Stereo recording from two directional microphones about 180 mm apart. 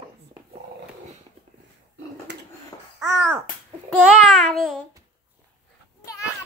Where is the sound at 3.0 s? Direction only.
10° right (ahead or behind).